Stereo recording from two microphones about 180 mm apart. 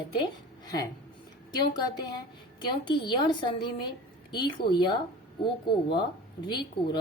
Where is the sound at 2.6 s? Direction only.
25° left (ahead or behind).